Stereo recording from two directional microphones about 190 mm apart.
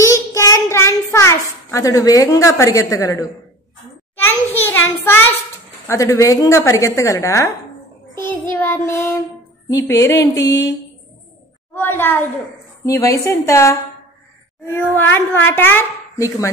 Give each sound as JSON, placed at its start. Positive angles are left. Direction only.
{"t": 0.0, "sound": "child singing", "side_deg": 15}
{"t": 4.2, "sound": "a child's voice", "side_deg": 10}
{"t": 5.9, "sound": "speech", "side_deg": 15}
{"t": 11.7, "sound": "speech", "side_deg": 10}